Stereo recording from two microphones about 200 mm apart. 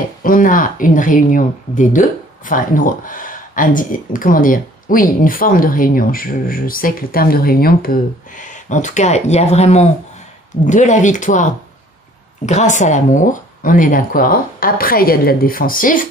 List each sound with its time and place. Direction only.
0.2 s speech: 45° left (ahead or behind)